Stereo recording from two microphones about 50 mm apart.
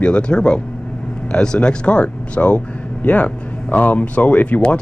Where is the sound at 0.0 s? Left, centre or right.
Centre.